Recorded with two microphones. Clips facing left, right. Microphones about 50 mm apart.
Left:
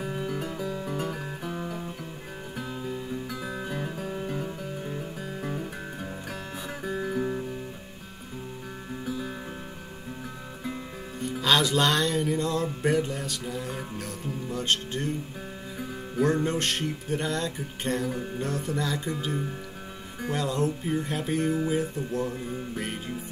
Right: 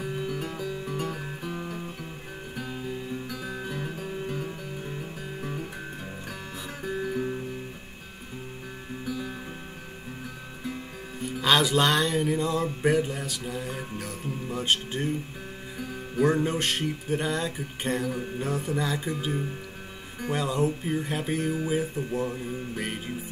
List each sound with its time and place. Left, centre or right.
0.0 s music: centre
0.7 s music: centre
1.0 s music: centre
3.3 s music: centre
6.8 s music: centre
11.4 s music: centre
16.2 s music: centre
18.0 s music: centre
18.4 s music: centre